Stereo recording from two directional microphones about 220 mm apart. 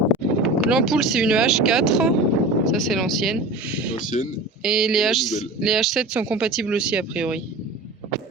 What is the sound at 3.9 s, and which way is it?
Speech, 35° left (ahead or behind).